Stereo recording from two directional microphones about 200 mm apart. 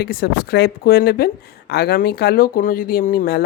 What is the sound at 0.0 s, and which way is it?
Speech, 50° left (ahead or behind).